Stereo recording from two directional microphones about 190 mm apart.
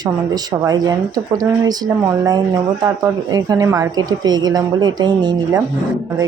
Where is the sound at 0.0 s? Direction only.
20° right (ahead or behind).